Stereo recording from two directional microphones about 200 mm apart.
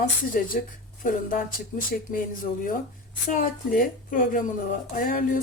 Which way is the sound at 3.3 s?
40° left (ahead or behind).